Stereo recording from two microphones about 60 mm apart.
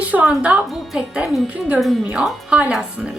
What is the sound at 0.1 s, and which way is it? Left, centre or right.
A woman's voice, right.